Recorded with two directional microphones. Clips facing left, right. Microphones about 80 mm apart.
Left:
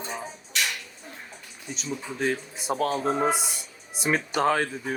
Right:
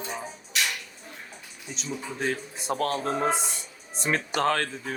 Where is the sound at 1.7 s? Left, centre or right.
Centre.